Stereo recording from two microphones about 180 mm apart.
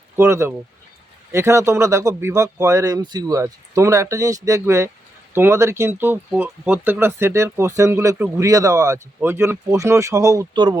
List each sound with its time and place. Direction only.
0.2 s speech: 15° right (ahead or behind)